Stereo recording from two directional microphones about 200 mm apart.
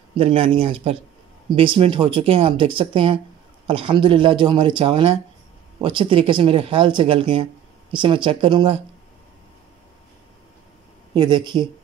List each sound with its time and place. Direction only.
0.2 s speech: 30° right (ahead or behind)
11.1 s speech: 20° right (ahead or behind)